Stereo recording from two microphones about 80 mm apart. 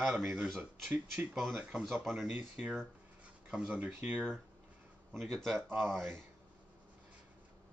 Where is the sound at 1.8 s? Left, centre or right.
Centre.